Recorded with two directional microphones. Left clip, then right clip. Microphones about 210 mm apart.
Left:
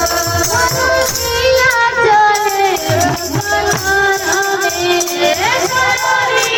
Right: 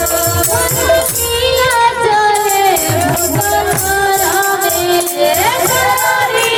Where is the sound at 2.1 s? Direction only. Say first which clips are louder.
Left 1 dB; 45° right (ahead or behind).